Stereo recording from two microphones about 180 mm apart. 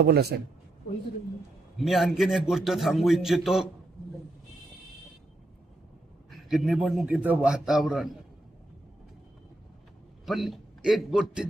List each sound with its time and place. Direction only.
0.0 s a man's voice: 65° right (ahead or behind)
1.8 s a man's voice: centre (ahead or behind)
6.5 s a man's voice: centre (ahead or behind)
10.2 s a man's voice: centre (ahead or behind)